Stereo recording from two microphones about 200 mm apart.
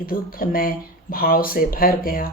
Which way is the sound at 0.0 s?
45° left (ahead or behind).